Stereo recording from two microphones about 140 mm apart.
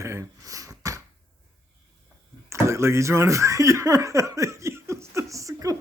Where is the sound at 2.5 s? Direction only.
20° right (ahead or behind).